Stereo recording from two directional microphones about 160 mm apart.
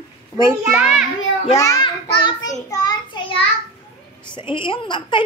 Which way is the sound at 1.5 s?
25° left (ahead or behind).